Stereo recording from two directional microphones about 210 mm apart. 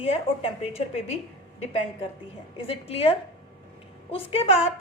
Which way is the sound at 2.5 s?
25° left (ahead or behind).